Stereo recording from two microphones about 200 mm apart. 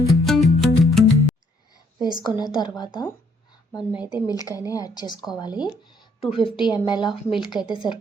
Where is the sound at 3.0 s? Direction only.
20° left (ahead or behind).